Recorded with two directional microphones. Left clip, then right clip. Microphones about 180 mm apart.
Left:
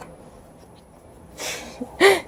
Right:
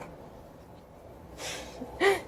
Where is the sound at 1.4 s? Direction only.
55° left (ahead or behind).